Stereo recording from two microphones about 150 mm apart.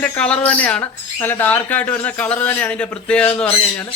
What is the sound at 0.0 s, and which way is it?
Speech, 10° left (ahead or behind).